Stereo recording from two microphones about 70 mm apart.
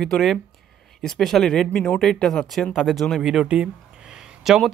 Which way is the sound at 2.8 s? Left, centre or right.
Centre.